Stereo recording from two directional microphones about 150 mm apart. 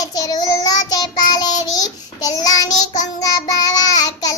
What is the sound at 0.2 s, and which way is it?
Child singing, 25° left (ahead or behind).